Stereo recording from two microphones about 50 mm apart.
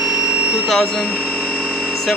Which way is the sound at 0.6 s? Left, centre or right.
Centre.